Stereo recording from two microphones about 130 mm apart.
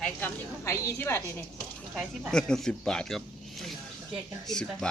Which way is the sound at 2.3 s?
5° left (ahead or behind).